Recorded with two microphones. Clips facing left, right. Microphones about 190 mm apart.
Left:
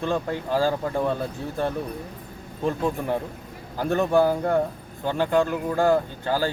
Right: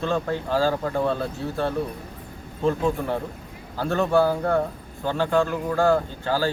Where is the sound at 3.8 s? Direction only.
15° left (ahead or behind).